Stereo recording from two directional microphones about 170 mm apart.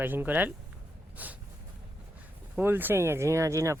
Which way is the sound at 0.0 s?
10° right (ahead or behind).